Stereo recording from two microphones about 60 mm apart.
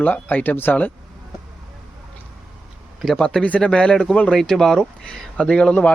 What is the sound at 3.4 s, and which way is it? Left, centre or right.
Speech, left.